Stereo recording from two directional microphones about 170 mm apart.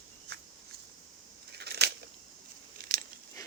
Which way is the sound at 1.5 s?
75° right (ahead or behind).